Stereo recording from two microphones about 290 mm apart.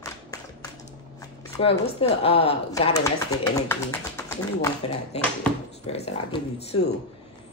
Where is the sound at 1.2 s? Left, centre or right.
Centre.